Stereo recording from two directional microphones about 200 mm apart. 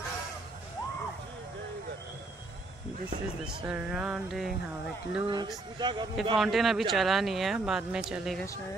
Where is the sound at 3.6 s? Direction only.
5° right (ahead or behind).